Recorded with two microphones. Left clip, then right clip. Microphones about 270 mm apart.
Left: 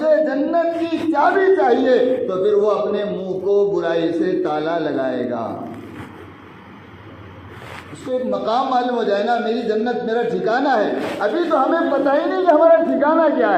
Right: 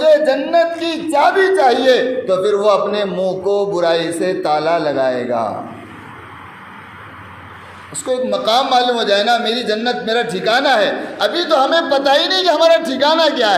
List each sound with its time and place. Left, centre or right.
0.0 s a sound: right
2.4 s speech: right
8.3 s speech: right
11.2 s speech: right